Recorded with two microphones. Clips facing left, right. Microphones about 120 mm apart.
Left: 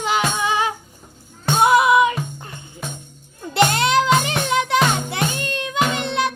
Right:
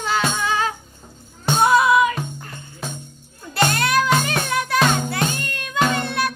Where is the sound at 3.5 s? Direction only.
20° left (ahead or behind).